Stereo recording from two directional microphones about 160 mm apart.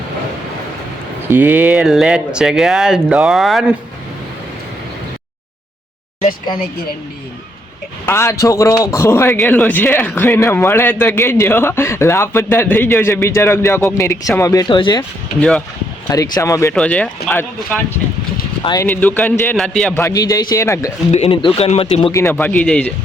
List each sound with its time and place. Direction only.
1.3 s speech: 10° right (ahead or behind)
8.0 s a man's voice: 15° left (ahead or behind)
15.4 s a man's voice: 5° left (ahead or behind)
16.0 s speech: 25° left (ahead or behind)
16.7 s a man's voice: 10° left (ahead or behind)
18.6 s speech: 25° left (ahead or behind)
18.9 s a man's voice: 10° left (ahead or behind)
20.0 s speech: 20° left (ahead or behind)
21.1 s speech: 35° left (ahead or behind)
22.1 s a man's voice: 15° left (ahead or behind)